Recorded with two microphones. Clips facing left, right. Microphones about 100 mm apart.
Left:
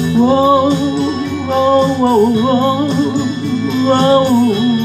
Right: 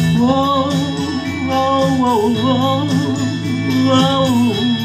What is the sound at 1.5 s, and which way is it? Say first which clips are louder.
Music: left 3 dB; 15° left (ahead or behind).